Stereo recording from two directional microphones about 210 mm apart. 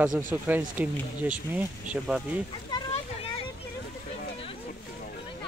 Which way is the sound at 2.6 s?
25° left (ahead or behind).